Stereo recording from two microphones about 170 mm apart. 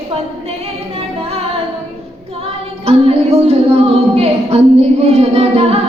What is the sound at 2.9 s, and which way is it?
Speech, 35° right (ahead or behind).